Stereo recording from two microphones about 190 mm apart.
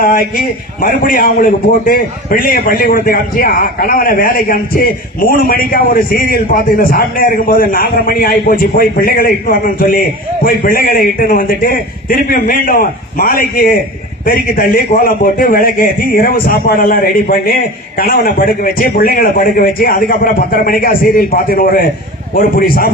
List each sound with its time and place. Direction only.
0.0 s a man's voice: 50° left (ahead or behind)